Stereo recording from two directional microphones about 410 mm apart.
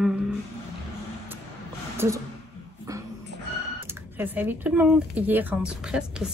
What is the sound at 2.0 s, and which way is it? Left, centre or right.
Speech, centre.